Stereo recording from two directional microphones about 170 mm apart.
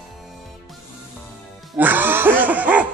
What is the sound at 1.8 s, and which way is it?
Laughter, 10° right (ahead or behind).